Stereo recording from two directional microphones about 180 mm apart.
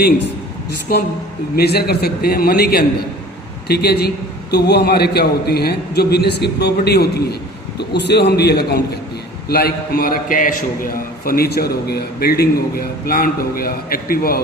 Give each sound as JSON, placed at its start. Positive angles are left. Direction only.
{"t": 0.9, "sound": "a woman's voice", "side_deg": 55}